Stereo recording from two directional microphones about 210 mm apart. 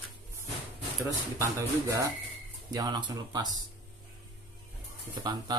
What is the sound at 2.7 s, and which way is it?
Mantra, 20° right (ahead or behind).